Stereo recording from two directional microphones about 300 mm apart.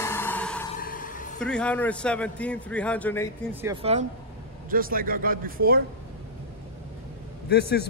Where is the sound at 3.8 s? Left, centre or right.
Centre.